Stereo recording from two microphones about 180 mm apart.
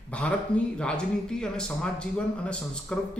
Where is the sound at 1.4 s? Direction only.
5° left (ahead or behind).